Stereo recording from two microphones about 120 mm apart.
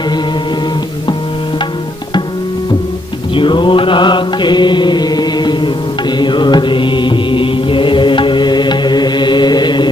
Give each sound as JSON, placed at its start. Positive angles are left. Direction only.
{"t": 3.3, "sound": "mantra", "side_deg": 40}